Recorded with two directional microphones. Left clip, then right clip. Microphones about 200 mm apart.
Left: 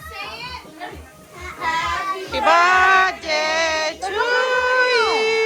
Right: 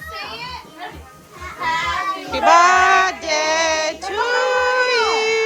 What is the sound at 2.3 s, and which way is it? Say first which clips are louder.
Child singing: right 2 dB; 10° right (ahead or behind).